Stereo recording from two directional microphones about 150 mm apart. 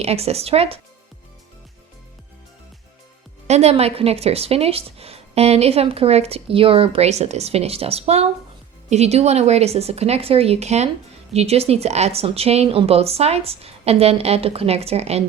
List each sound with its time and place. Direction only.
0.0 s speech: 45° right (ahead or behind)
3.4 s speech: 45° right (ahead or behind)